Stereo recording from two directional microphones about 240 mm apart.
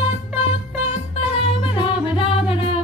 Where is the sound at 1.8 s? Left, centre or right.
Left.